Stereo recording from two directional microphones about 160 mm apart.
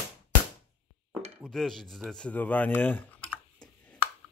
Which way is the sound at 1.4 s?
Centre (ahead or behind).